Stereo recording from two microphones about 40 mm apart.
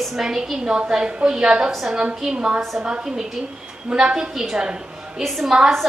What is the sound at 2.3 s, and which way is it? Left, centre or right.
Speech, right.